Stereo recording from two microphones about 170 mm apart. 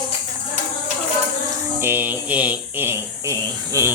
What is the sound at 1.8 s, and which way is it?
Speech, 10° right (ahead or behind).